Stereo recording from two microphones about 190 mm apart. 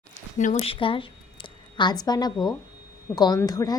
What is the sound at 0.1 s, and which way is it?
A woman's voice, 40° left (ahead or behind).